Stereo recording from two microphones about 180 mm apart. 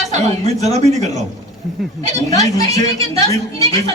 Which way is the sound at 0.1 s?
35° right (ahead or behind).